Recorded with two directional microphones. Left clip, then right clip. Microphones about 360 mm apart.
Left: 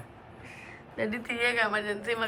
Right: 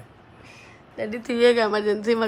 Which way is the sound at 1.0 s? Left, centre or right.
Centre.